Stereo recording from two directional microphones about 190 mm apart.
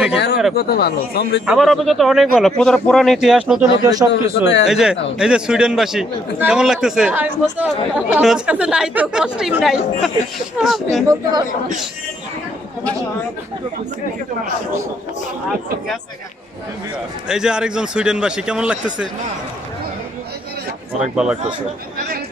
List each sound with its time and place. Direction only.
0.6 s speech: 55° left (ahead or behind)
1.4 s a man's voice: 5° right (ahead or behind)
3.8 s a man's voice: 20° right (ahead or behind)
4.1 s speech: 65° left (ahead or behind)
4.6 s a man's voice: 5° right (ahead or behind)
17.3 s a man's voice: 5° right (ahead or behind)
21.0 s a man's voice: 5° right (ahead or behind)